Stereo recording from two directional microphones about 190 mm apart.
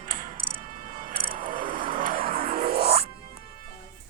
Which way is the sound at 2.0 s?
45° right (ahead or behind).